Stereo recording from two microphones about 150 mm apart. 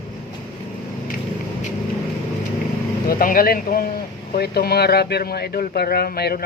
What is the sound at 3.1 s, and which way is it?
A man's voice, 70° left (ahead or behind).